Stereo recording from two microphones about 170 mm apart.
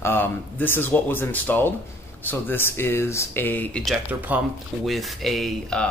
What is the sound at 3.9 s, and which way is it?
Speech, 10° right (ahead or behind).